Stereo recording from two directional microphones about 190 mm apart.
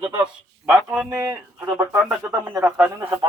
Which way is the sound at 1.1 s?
15° right (ahead or behind).